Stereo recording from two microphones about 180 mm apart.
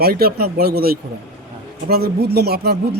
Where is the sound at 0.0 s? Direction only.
55° right (ahead or behind).